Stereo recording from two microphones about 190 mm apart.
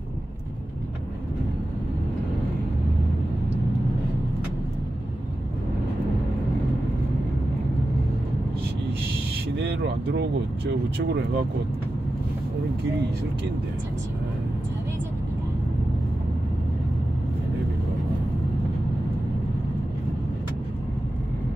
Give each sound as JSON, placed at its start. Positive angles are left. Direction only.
{"t": 9.6, "sound": "speech", "side_deg": -65}